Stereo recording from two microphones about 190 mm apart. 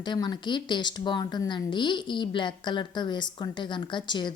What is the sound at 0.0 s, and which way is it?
A woman's voice, 25° left (ahead or behind).